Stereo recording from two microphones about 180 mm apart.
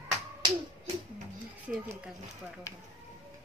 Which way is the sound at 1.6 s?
5° right (ahead or behind).